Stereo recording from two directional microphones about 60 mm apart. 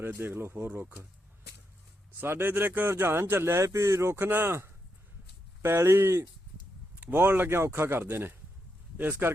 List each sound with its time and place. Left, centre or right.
0.0 s speech: right
2.2 s speech: right
4.3 s speech: right
5.6 s speech: right